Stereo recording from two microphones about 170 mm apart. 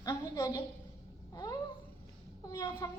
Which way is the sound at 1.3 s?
20° left (ahead or behind).